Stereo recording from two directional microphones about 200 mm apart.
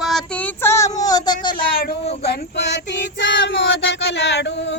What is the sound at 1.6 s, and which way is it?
Speech, 45° left (ahead or behind).